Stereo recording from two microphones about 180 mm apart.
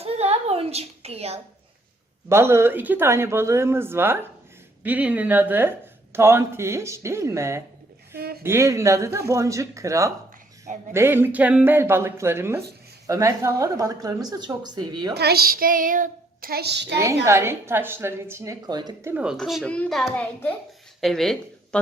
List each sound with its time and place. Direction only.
0.0 s a sound: 35° right (ahead or behind)
2.3 s speech: 15° right (ahead or behind)
8.1 s a sound: 55° right (ahead or behind)
8.4 s a woman's voice: 15° right (ahead or behind)
15.1 s child singing: 60° right (ahead or behind)
17.2 s speech: 15° right (ahead or behind)
19.1 s a child's voice: 5° right (ahead or behind)